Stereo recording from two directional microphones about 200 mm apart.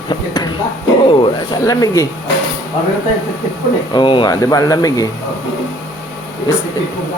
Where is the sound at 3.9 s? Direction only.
25° left (ahead or behind).